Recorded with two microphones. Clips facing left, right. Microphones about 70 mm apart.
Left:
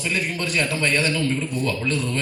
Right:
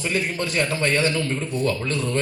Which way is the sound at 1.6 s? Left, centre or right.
Right.